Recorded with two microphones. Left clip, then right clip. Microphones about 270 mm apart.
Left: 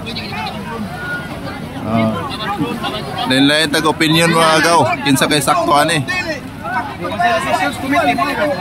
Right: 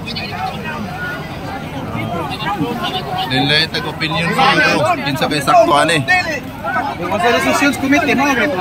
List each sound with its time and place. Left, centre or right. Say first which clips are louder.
3.3 s speech: left 2 dB; centre
7.4 s speech: right 2 dB; right